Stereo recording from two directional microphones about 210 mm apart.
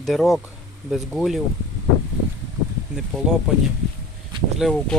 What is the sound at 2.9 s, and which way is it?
Speech, 5° right (ahead or behind).